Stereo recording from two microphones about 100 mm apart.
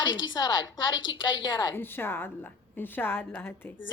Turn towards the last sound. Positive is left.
turn(degrees=20)  # may be behind; listen again after turning